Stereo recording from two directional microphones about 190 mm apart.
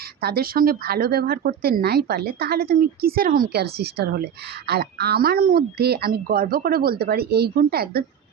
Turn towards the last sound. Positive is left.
turn(degrees=-55)  # may be behind; listen again after turning